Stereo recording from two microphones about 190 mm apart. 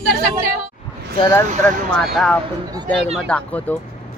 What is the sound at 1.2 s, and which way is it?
Speech, 15° left (ahead or behind).